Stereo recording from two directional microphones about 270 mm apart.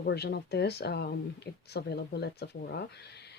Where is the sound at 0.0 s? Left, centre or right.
Left.